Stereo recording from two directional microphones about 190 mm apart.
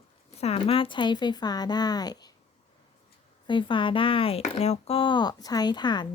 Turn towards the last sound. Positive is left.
turn(degrees=25)  # may be behind; listen again after turning